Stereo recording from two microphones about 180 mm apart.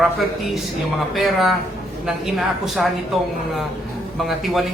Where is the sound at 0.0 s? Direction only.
Centre (ahead or behind).